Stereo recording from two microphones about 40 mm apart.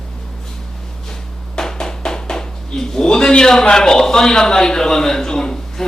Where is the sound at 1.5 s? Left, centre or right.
Centre.